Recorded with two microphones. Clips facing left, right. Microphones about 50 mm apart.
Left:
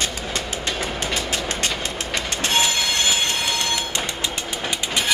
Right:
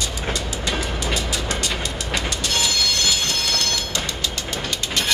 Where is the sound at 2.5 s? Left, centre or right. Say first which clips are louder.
Left 3 dB; left.